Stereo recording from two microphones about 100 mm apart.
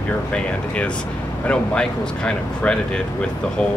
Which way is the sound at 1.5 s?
10° left (ahead or behind).